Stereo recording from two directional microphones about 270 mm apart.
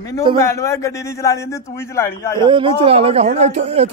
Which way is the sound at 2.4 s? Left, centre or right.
Centre.